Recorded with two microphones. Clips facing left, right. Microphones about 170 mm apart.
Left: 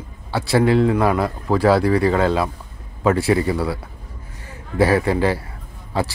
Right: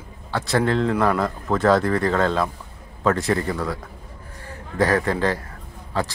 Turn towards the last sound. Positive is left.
turn(degrees=10)  # may be behind; listen again after turning